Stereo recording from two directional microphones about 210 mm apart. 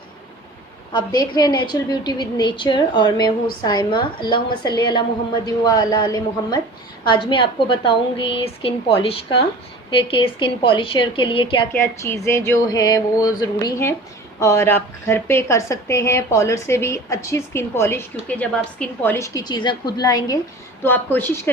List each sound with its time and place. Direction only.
0.9 s a woman's voice: 20° left (ahead or behind)
11.7 s a woman's voice: 15° left (ahead or behind)